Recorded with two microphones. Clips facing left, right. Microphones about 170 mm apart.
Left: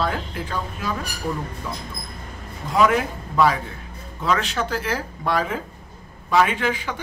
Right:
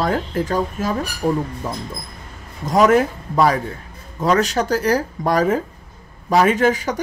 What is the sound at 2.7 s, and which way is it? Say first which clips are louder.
Speech: right 5 dB; 45° right (ahead or behind).